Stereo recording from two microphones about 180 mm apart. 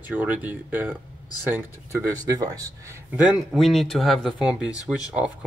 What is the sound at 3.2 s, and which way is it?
Speech, 5° right (ahead or behind).